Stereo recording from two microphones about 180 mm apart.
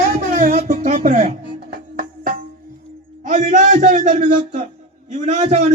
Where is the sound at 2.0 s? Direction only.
50° right (ahead or behind).